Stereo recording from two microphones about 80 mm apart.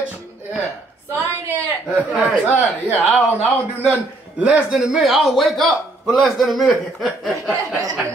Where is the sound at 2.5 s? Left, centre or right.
Left.